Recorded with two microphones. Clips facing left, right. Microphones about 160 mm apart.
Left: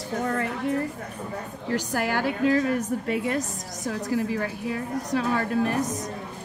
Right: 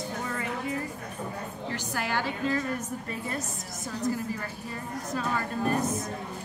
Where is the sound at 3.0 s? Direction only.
85° left.